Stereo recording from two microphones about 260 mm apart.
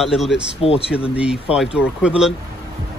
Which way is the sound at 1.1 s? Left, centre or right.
Centre.